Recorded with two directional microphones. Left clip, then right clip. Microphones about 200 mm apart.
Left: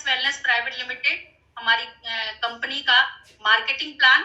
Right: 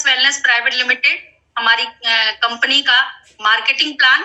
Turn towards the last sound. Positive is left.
turn(degrees=-45)  # may be behind; listen again after turning